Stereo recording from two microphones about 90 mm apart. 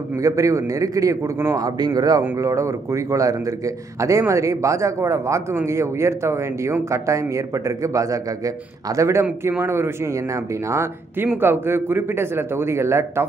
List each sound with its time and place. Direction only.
0.2 s a man's voice: 35° right (ahead or behind)